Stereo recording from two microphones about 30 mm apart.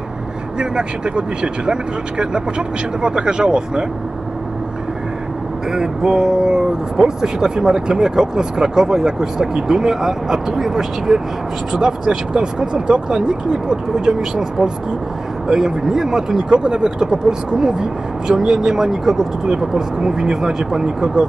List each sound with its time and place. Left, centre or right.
0.6 s speech: right
5.7 s speech: centre
16.4 s speech: right; by 19.2 s centre
19.4 s speech: right